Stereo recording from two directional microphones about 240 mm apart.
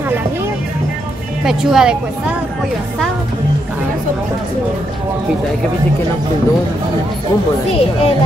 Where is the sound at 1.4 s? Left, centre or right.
Centre.